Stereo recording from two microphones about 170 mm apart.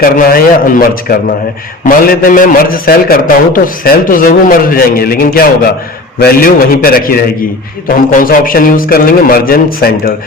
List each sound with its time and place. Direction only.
0.0 s a man's voice: 60° left (ahead or behind)